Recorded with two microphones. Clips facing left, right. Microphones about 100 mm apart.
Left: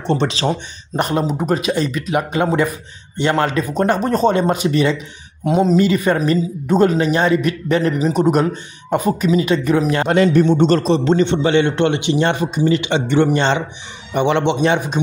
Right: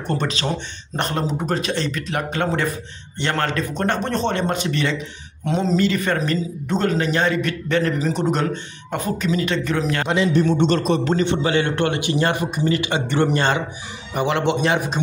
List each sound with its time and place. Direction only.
0.0 s a man's voice: 25° left (ahead or behind)
0.9 s speech: 5° left (ahead or behind)
8.0 s speech: 5° left (ahead or behind)
10.0 s a man's voice: 50° left (ahead or behind)
10.6 s a man's voice: 35° left (ahead or behind)